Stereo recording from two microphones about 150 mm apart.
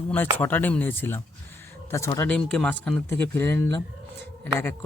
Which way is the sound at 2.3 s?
5° left (ahead or behind).